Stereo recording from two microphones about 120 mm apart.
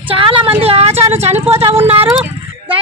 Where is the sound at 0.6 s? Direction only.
55° right (ahead or behind).